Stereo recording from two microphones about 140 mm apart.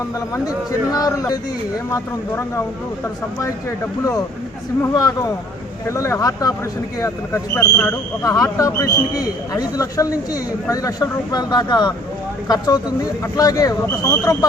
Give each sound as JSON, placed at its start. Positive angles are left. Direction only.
{"t": 0.3, "sound": "a man's voice", "side_deg": 25}
{"t": 4.8, "sound": "a man's voice", "side_deg": 25}